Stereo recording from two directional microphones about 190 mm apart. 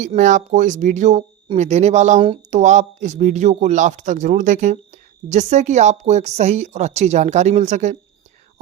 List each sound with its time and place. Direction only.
0.0 s speech: 40° right (ahead or behind)